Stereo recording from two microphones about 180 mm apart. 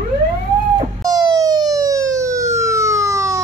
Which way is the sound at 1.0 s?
20° right (ahead or behind).